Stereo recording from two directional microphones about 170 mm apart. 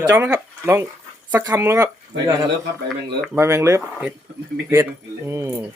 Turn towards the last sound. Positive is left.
turn(degrees=-15)  # may be behind; listen again after turning